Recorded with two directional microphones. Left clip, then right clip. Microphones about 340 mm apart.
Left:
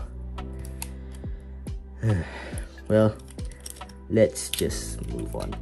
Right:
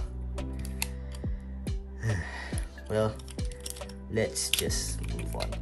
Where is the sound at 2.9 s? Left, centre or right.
Centre.